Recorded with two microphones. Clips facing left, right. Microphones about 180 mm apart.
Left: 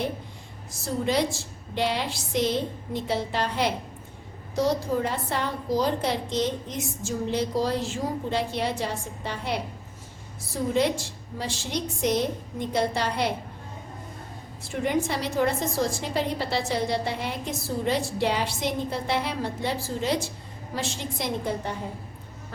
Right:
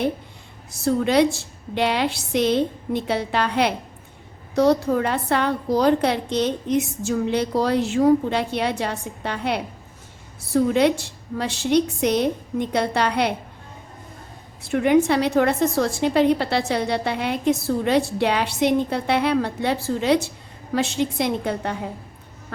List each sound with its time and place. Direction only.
0.7 s a woman's voice: 65° right (ahead or behind)
14.6 s a woman's voice: 65° right (ahead or behind)